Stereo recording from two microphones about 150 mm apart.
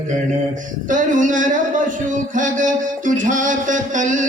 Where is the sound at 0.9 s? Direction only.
60° right (ahead or behind).